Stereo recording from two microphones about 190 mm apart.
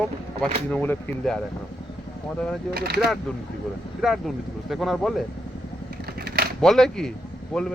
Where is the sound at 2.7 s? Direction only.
55° right (ahead or behind).